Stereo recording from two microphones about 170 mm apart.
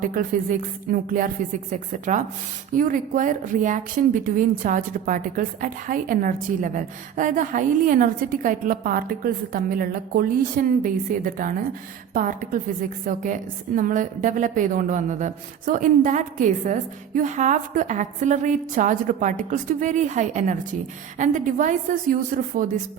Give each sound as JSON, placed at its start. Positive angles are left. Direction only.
{"t": 0.1, "sound": "speech", "side_deg": -55}